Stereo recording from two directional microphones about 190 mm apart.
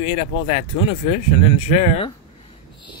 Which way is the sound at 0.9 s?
35° left (ahead or behind).